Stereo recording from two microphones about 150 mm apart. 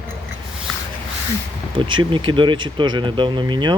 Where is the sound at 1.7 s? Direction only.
35° right (ahead or behind).